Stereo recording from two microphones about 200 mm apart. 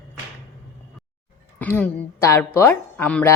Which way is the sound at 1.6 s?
10° left (ahead or behind).